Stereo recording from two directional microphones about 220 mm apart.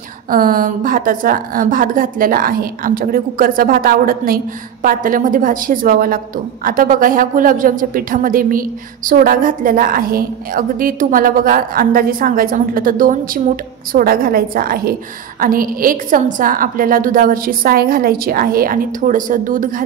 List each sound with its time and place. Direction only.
0.3 s a woman's voice: 40° right (ahead or behind)